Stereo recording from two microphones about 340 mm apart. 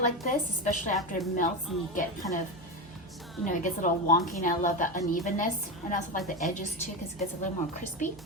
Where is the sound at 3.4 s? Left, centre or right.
Left.